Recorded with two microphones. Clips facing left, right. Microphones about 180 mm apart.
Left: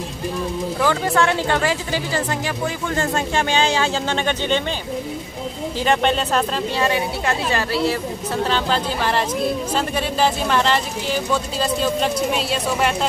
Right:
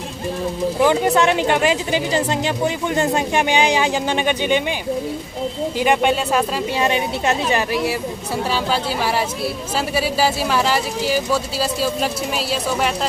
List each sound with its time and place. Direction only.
0.7 s speech: 20° right (ahead or behind)
5.8 s speech: 10° right (ahead or behind)